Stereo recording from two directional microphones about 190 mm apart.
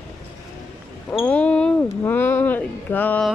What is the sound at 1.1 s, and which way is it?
Basketball bounce, 5° left (ahead or behind).